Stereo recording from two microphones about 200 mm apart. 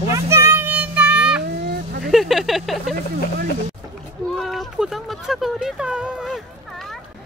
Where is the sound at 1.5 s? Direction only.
55° right (ahead or behind).